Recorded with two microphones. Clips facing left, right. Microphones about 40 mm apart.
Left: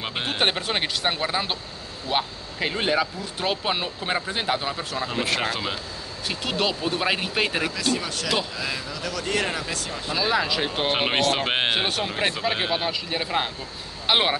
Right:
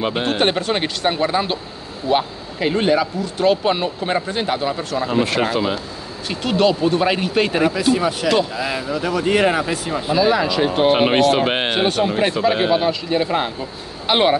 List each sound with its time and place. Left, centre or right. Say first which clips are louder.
0.0 s speech: right 6 dB; centre
7.6 s speech: right 9 dB; centre
10.1 s speech: right 7 dB; centre